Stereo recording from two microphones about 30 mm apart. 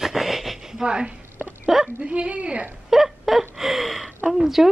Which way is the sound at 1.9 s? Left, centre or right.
Right.